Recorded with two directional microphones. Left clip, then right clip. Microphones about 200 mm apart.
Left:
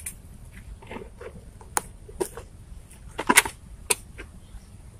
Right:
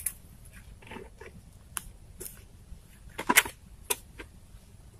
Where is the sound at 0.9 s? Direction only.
15° right (ahead or behind).